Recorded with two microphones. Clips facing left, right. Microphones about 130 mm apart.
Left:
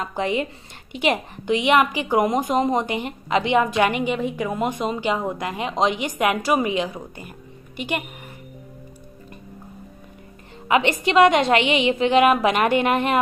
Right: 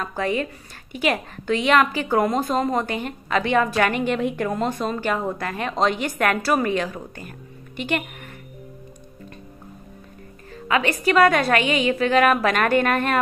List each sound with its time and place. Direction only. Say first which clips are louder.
0.0 s a woman's voice: left 1 dB; 20° left (ahead or behind)
4.2 s speech: right 1 dB; centre (ahead or behind)
10.7 s a woman's voice: left 1 dB; 20° left (ahead or behind)